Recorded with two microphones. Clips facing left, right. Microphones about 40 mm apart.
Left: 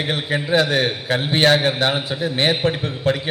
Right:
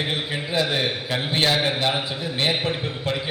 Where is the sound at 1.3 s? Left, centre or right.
Left.